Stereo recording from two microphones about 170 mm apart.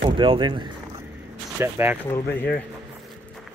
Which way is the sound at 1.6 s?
15° right (ahead or behind).